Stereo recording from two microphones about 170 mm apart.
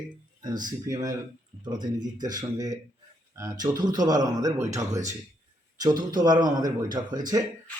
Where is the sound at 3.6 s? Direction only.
20° right (ahead or behind).